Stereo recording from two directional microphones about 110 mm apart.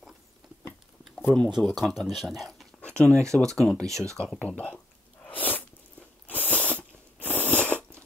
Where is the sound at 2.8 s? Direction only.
10° left (ahead or behind).